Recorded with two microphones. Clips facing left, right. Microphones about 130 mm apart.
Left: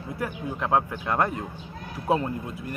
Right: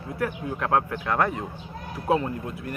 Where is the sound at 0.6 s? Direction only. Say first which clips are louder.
Even; 10° left (ahead or behind).